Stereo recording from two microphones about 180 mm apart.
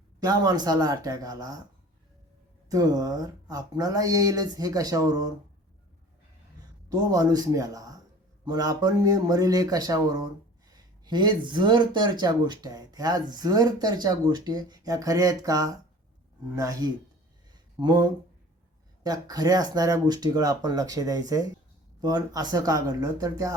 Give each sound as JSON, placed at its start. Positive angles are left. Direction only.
{"t": 0.2, "sound": "speech", "side_deg": -20}
{"t": 2.6, "sound": "speech", "side_deg": -20}
{"t": 6.9, "sound": "speech", "side_deg": -20}